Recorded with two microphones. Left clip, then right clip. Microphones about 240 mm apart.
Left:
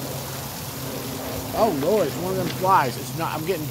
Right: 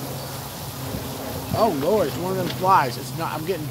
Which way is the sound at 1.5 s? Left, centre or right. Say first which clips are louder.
Even; centre.